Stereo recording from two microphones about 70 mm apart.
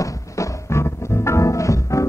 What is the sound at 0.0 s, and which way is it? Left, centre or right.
Music, left.